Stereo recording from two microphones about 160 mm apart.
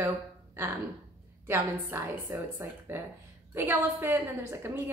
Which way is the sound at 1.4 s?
15° right (ahead or behind).